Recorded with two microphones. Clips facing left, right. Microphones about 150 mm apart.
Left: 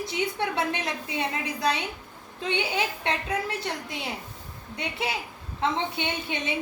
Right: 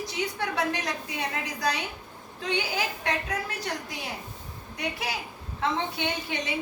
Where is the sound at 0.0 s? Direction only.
25° left (ahead or behind).